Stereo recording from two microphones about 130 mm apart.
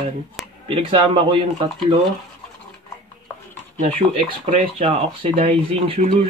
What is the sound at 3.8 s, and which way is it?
Speech, 55° right (ahead or behind).